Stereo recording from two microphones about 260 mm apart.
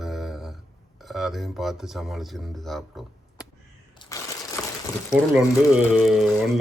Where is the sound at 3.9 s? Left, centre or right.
Centre.